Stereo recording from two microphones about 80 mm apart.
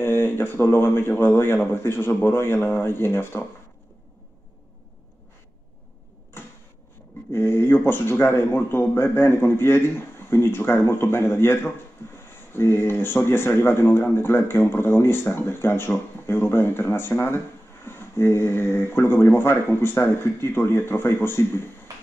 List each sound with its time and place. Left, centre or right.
0.0 s speech: left
7.3 s speech: left